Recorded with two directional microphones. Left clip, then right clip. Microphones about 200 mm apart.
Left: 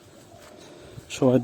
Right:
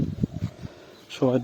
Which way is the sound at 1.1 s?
20° left (ahead or behind).